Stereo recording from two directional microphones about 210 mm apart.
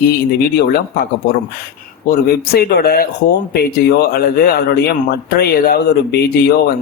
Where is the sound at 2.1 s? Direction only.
50° left (ahead or behind).